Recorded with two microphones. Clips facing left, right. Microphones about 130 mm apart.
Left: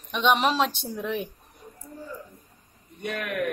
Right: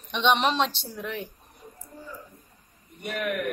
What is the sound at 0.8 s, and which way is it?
Speech, 20° left (ahead or behind).